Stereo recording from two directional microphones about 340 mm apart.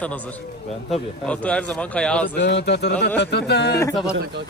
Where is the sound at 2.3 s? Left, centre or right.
Left.